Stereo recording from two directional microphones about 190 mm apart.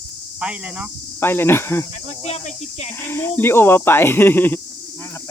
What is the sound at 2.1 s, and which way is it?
Speech, 35° left (ahead or behind).